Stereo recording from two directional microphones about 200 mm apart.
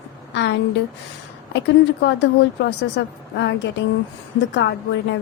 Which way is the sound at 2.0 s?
60° left (ahead or behind).